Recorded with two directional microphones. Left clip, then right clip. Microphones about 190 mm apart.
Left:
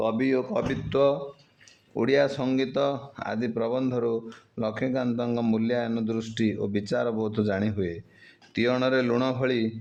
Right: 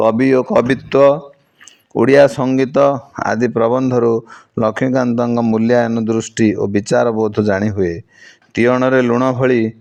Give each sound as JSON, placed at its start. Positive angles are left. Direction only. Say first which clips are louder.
{"t": 0.0, "sound": "speech", "louder": "right 13 dB", "side_deg": -50}
{"t": 5.3, "sound": "speech", "louder": "right 11 dB", "side_deg": -30}
{"t": 5.5, "sound": "speech", "louder": "right 13 dB", "side_deg": -50}
{"t": 8.5, "sound": "a man's voice", "louder": "right 11 dB", "side_deg": -40}
{"t": 9.4, "sound": "speech", "louder": "right 12 dB", "side_deg": -45}